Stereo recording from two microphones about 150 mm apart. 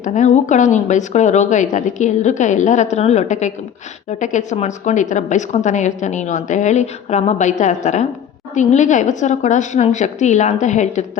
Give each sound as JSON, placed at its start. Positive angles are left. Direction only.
{"t": 0.0, "sound": "a woman's voice", "side_deg": 55}